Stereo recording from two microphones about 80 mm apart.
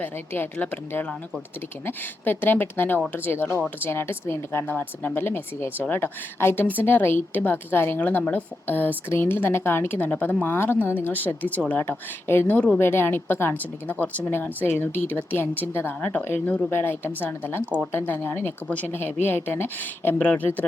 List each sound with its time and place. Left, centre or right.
0.0 s a woman's voice: left
12.8 s a woman's voice: left